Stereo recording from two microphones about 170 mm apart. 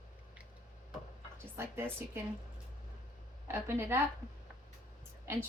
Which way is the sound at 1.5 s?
15° right (ahead or behind).